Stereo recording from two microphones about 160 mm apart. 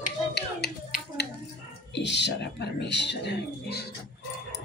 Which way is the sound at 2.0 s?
90° left.